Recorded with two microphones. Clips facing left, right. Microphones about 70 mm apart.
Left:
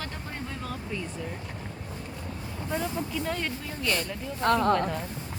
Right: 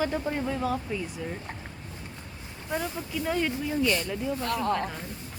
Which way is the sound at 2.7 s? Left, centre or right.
Centre.